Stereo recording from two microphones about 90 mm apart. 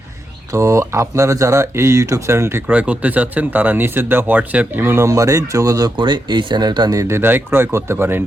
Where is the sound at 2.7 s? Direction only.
15° right (ahead or behind); by 5.9 s 40° right (ahead or behind).